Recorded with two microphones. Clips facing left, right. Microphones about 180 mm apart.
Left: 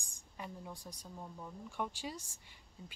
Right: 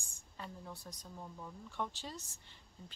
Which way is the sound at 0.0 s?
15° left (ahead or behind).